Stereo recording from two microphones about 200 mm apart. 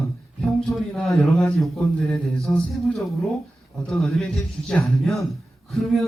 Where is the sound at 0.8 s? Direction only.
Centre (ahead or behind).